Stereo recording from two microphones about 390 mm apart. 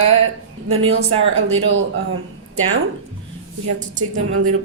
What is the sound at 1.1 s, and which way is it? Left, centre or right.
Speech, centre.